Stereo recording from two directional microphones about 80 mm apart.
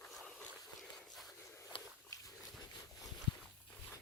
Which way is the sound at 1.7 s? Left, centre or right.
Left.